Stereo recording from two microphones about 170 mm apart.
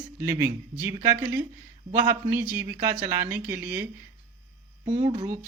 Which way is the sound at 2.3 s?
10° right (ahead or behind).